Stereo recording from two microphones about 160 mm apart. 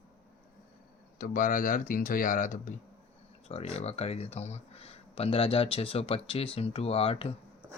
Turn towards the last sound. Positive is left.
turn(degrees=35)  # may be behind; listen again after turning